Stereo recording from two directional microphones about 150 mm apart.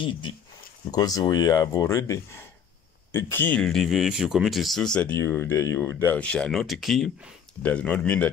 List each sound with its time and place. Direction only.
0.9 s speech: 25° left (ahead or behind); by 8.3 s 10° left (ahead or behind)